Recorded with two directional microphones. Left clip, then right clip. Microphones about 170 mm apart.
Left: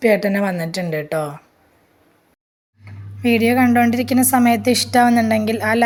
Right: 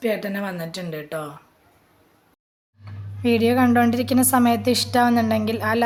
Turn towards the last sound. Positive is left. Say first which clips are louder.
# left 4 dB
turn(degrees=10)  # may be behind; listen again after turning